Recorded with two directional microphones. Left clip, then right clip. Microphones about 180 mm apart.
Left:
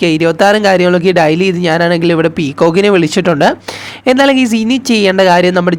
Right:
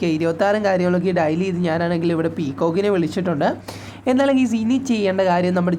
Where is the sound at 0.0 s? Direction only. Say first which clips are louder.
Left 10 dB; 30° left (ahead or behind).